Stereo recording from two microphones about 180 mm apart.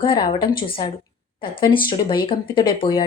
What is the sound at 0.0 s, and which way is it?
A woman's voice, 25° left (ahead or behind).